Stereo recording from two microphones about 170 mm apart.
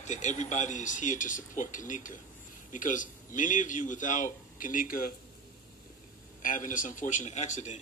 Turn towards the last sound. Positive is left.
turn(degrees=45)  # may be behind; listen again after turning